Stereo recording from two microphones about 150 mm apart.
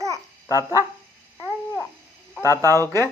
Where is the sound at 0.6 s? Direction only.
20° right (ahead or behind).